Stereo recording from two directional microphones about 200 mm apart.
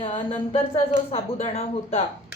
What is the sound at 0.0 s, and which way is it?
A woman's voice, 30° left (ahead or behind).